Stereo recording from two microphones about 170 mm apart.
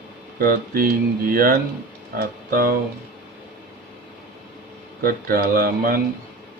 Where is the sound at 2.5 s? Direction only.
60° right (ahead or behind).